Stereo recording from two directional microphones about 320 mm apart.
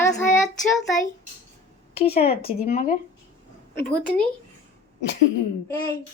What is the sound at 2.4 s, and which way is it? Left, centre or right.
Speech, left.